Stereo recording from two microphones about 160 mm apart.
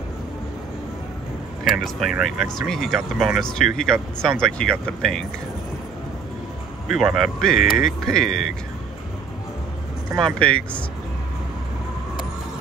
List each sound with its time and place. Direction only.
1.6 s a sound: 65° left (ahead or behind)
2.0 s speech: centre (ahead or behind)
6.9 s speech: centre (ahead or behind)
10.2 s speech: 5° left (ahead or behind)